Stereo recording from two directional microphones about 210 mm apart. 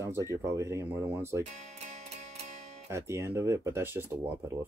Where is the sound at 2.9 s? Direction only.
15° right (ahead or behind).